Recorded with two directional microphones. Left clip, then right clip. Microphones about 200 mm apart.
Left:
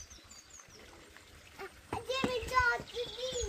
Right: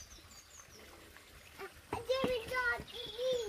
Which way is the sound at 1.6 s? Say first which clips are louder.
Left 1 dB; 50° left (ahead or behind).